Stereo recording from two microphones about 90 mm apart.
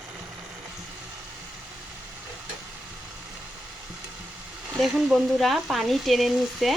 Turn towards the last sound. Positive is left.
turn(degrees=0)  # may be behind; listen again after turning